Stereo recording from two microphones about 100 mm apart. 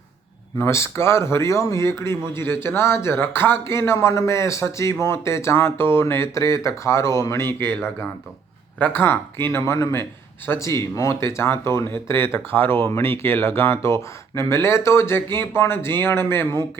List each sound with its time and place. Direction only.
0.6 s speech: 25° left (ahead or behind)
8.8 s speech: 20° left (ahead or behind)